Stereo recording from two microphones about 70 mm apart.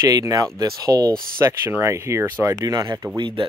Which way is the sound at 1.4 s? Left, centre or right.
Right.